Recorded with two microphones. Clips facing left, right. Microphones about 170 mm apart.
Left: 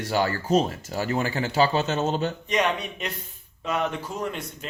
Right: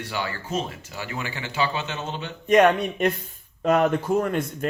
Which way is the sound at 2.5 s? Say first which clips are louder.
Right 10 dB; 50° right (ahead or behind).